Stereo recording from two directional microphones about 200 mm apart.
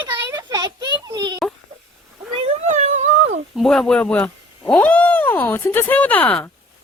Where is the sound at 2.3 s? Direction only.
30° right (ahead or behind).